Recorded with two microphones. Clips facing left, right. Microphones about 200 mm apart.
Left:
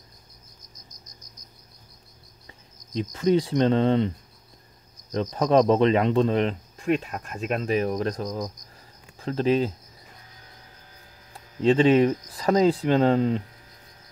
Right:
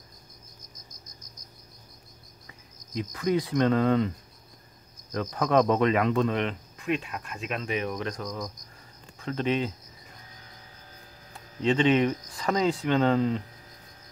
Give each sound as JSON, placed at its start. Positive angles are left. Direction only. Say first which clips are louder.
{"t": 2.4, "sound": "speech", "louder": "left 3 dB", "side_deg": 30}
{"t": 5.1, "sound": "speech", "louder": "left 4 dB", "side_deg": 30}
{"t": 11.6, "sound": "speech", "louder": "left 5 dB", "side_deg": 35}